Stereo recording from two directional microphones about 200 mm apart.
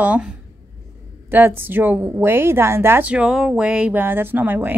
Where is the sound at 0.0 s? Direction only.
5° right (ahead or behind).